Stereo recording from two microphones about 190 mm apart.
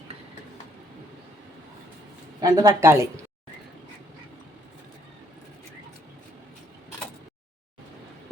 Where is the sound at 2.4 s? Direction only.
20° right (ahead or behind).